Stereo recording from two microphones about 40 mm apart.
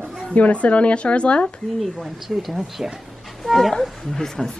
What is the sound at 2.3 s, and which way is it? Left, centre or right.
Speech, centre.